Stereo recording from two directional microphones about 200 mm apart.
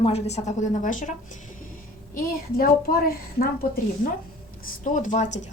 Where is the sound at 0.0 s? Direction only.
30° left (ahead or behind).